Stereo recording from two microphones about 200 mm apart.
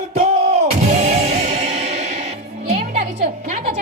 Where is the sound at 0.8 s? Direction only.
35° right (ahead or behind).